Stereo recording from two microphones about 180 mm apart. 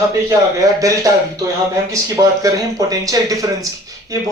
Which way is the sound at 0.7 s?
20° right (ahead or behind).